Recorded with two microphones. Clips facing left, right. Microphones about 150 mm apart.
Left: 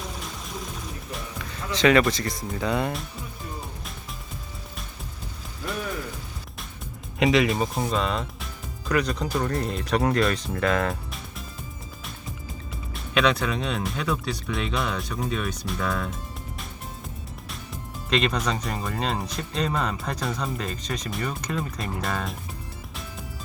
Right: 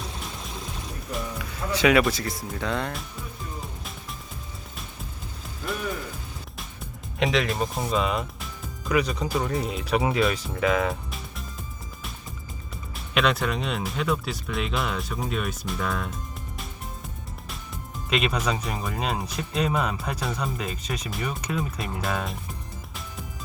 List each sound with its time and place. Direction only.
1.1 s music: 10° right (ahead or behind)
2.6 s speech: 5° left (ahead or behind)
7.2 s speech: centre (ahead or behind)
12.9 s speech: centre (ahead or behind)
18.1 s speech: 5° right (ahead or behind)